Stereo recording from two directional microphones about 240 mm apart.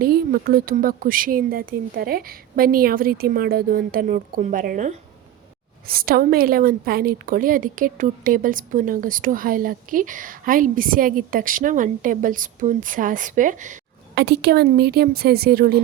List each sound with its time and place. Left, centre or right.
0.0 s a woman's voice: right
14.2 s a woman's voice: right